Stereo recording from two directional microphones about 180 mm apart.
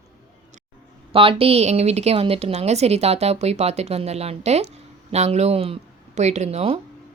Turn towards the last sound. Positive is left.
turn(degrees=-35)  # may be behind; listen again after turning